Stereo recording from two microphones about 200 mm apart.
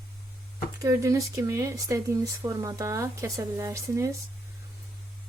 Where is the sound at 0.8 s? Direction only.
15° right (ahead or behind).